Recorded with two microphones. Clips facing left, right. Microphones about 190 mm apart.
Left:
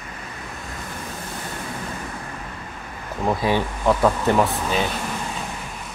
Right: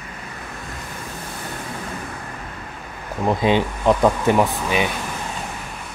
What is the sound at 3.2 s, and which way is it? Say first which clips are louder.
Speech: right 3 dB; 20° right (ahead or behind).